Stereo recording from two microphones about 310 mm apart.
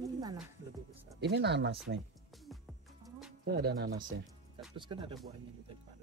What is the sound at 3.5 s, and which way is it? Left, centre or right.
Speech, right.